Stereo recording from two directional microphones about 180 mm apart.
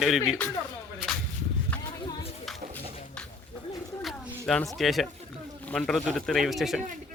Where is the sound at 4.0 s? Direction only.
Centre (ahead or behind).